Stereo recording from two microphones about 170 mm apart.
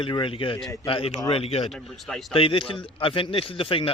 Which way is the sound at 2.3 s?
30° left (ahead or behind).